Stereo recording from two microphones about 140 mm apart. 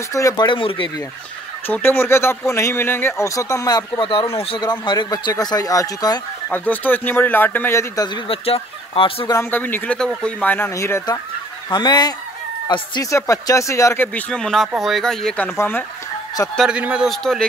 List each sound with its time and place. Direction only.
0.1 s speech: 25° left (ahead or behind); by 0.8 s 40° left (ahead or behind)
1.7 s speech: 15° left (ahead or behind)
6.5 s speech: 15° left (ahead or behind)
7.9 s speech: 30° left (ahead or behind)
8.3 s speech: 40° left (ahead or behind)
9.3 s speech: 15° left (ahead or behind)
14.0 s speech: 10° left (ahead or behind)
16.5 s speech: 5° right (ahead or behind)